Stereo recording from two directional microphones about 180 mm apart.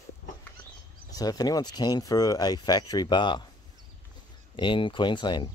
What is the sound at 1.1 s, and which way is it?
Speech, 20° left (ahead or behind).